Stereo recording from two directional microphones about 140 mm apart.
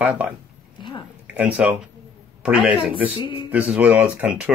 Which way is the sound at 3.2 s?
35° left (ahead or behind).